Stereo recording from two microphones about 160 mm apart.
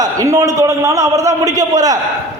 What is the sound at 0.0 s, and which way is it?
A man's voice, 20° right (ahead or behind).